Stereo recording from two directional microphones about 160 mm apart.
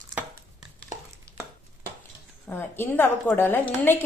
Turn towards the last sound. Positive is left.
turn(degrees=10)  # may be behind; listen again after turning